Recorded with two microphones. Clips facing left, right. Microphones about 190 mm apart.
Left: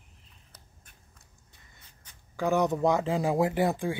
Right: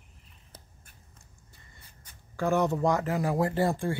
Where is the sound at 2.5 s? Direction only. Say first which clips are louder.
Left 1 dB; 15° left (ahead or behind).